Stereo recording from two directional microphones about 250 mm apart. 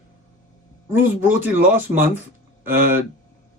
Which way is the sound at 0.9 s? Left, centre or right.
Centre.